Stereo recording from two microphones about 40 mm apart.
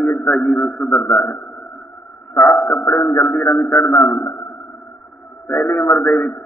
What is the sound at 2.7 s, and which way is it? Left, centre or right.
Speech, left.